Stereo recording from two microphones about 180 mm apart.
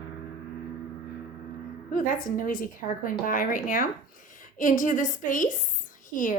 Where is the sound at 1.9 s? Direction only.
50° left (ahead or behind).